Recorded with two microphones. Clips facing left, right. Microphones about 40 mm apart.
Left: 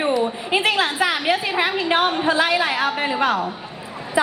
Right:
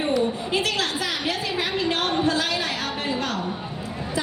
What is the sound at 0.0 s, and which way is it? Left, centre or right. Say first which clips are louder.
A woman's voice: left 2 dB; left.